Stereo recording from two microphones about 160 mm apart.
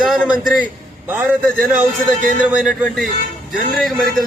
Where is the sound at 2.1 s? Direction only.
55° right (ahead or behind).